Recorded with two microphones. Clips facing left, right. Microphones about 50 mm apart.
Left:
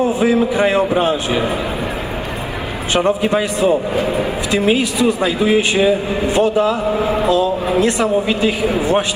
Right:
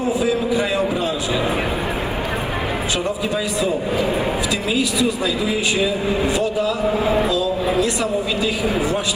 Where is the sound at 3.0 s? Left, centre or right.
Left.